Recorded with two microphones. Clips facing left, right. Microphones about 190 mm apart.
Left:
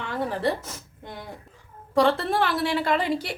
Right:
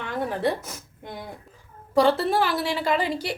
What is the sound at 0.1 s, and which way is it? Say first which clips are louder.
Speech: right 1 dB; 15° right (ahead or behind).